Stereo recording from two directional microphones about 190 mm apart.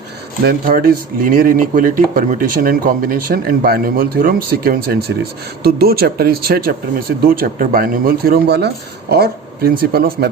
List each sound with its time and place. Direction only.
0.4 s speech: 50° right (ahead or behind)